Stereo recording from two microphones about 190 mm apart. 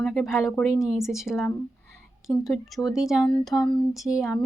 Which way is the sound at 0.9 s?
Centre (ahead or behind).